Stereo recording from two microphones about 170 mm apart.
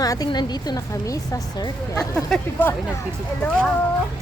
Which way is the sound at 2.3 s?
10° left (ahead or behind).